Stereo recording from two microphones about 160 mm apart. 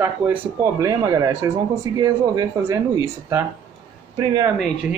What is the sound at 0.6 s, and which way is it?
Speech, 20° right (ahead or behind).